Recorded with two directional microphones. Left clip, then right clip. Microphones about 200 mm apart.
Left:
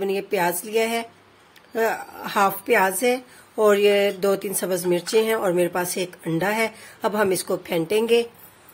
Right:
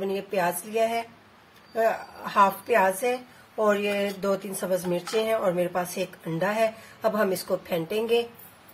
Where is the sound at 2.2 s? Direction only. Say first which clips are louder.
Left 1 dB; 40° left (ahead or behind).